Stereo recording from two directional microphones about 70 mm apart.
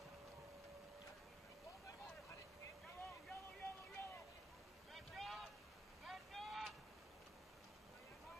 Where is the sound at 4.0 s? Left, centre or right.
Left.